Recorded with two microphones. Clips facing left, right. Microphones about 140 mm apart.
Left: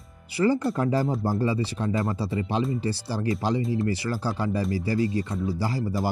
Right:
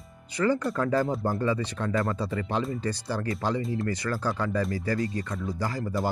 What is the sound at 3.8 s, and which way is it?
Speech, 10° left (ahead or behind).